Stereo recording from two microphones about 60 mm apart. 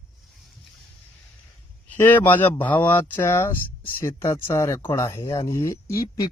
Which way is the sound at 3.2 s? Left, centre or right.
Left.